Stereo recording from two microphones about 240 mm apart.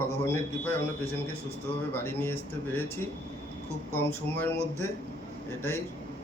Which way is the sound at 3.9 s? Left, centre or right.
Centre.